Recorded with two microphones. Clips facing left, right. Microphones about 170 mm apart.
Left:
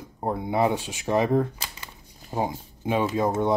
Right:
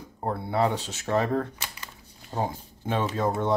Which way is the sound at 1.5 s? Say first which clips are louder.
Even; 35° left (ahead or behind).